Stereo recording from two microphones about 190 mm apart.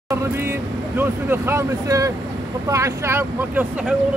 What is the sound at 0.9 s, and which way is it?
Speech, 10° right (ahead or behind).